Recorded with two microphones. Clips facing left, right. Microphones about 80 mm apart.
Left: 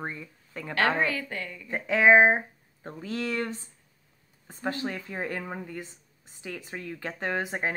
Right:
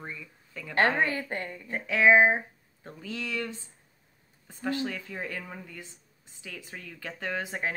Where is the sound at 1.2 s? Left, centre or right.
Right.